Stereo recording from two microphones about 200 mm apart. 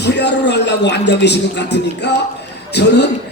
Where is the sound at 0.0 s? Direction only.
60° left (ahead or behind).